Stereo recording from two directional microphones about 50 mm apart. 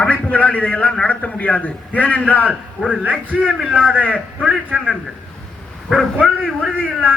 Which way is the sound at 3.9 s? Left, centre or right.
Right.